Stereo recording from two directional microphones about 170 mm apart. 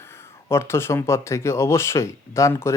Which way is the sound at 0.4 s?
15° left (ahead or behind).